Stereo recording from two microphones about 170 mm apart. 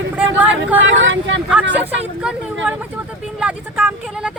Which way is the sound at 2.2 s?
5° right (ahead or behind).